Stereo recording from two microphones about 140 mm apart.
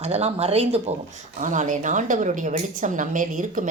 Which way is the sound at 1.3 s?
60° right (ahead or behind).